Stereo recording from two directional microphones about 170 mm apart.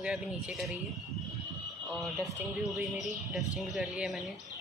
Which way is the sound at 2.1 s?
15° right (ahead or behind).